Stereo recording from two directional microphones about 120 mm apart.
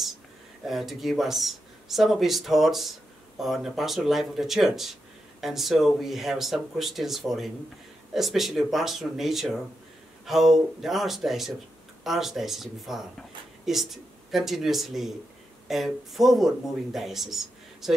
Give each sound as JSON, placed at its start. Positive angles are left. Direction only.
{"t": 0.7, "sound": "speech", "side_deg": 0}